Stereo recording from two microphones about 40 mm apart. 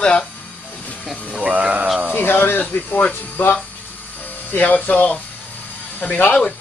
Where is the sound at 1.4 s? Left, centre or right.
Right.